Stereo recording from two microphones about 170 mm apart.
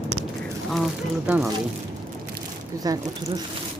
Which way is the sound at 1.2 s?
5° right (ahead or behind).